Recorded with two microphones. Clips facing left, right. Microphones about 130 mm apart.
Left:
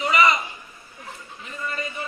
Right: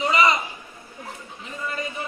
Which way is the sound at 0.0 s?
25° right (ahead or behind).